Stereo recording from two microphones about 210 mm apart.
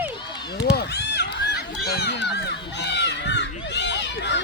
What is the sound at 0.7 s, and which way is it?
Run, 50° left (ahead or behind).